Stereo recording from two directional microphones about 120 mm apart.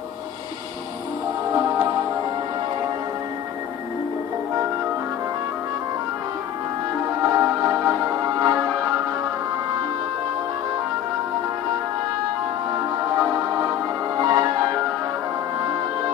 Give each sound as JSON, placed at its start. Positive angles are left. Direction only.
{"t": 1.5, "sound": "music", "side_deg": -25}
{"t": 7.2, "sound": "music", "side_deg": -20}
{"t": 13.2, "sound": "music", "side_deg": -25}